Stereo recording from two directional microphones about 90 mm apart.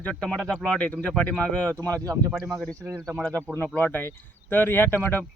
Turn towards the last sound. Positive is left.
turn(degrees=25)  # may be behind; listen again after turning